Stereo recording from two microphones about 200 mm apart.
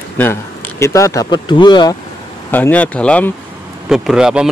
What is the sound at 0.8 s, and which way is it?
Speech, 15° left (ahead or behind).